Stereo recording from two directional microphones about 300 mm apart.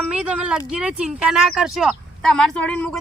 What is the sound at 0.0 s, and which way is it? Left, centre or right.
Speech, centre.